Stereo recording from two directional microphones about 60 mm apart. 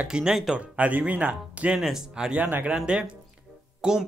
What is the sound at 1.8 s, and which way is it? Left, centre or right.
Speech, centre.